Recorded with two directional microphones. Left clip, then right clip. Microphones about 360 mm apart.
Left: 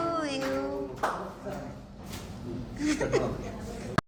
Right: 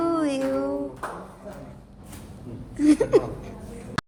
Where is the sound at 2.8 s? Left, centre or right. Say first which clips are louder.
Right 9 dB; centre.